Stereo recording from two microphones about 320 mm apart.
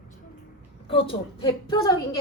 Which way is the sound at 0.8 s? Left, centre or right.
Centre.